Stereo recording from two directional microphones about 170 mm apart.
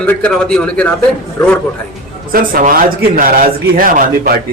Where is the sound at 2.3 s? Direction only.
55° right (ahead or behind).